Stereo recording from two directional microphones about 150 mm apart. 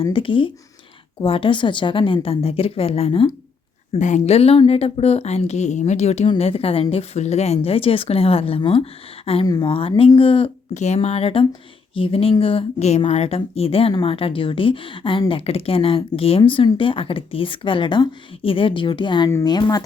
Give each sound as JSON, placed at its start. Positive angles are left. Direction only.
{"t": 0.0, "sound": "speech", "side_deg": 35}
{"t": 3.9, "sound": "a woman's voice", "side_deg": 55}
{"t": 10.8, "sound": "a woman's voice", "side_deg": 50}